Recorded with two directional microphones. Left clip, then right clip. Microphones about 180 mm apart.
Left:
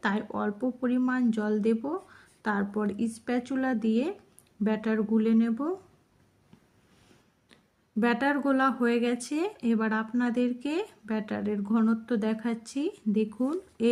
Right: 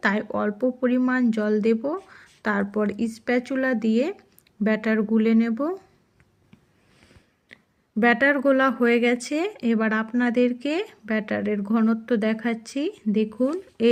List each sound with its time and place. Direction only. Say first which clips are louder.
0.0 s speech: right 6 dB; 20° right (ahead or behind)
7.5 s speech: right 4 dB; 15° right (ahead or behind)